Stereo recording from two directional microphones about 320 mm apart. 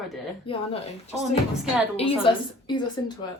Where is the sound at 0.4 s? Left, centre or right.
Centre.